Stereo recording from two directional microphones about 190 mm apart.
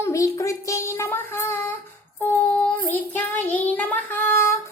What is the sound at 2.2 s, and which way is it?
Child singing, 10° left (ahead or behind).